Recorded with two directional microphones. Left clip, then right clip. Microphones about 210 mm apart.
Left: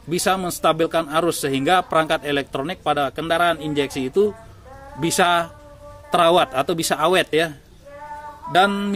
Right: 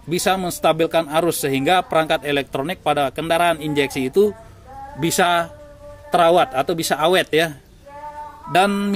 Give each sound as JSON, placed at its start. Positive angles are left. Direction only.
{"t": 0.1, "sound": "a man's voice", "side_deg": -5}